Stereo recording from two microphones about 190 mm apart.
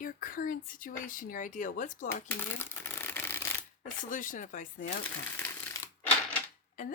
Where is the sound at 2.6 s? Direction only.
10° left (ahead or behind).